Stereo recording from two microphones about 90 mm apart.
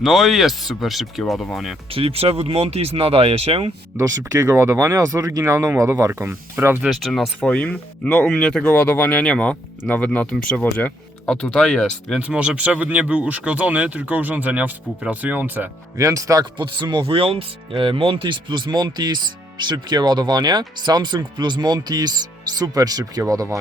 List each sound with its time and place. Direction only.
0.0 s speech: centre (ahead or behind)
1.9 s speech: 90° right
3.9 s speech: 35° right (ahead or behind)
6.8 s speech: centre (ahead or behind)
7.5 s speech: 15° left (ahead or behind)
10.6 s speech: 20° left (ahead or behind)
11.3 s speech: 10° left (ahead or behind)
12.2 s speech: 10° right (ahead or behind)
16.0 s speech: 35° right (ahead or behind)
16.6 s speech: 60° right (ahead or behind); by 23.6 s 40° right (ahead or behind)